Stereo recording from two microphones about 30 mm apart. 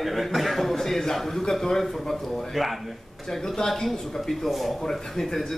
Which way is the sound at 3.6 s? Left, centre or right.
Centre.